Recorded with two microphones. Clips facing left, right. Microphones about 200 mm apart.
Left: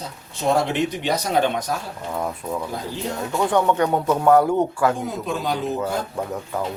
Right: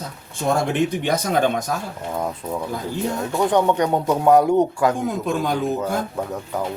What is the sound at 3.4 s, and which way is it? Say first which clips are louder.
Speech: right 1 dB; 20° right (ahead or behind).